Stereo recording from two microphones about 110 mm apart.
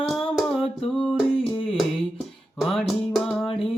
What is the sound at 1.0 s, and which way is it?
Music, 5° right (ahead or behind).